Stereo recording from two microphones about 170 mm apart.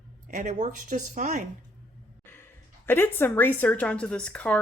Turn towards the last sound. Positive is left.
turn(degrees=5)  # may be behind; listen again after turning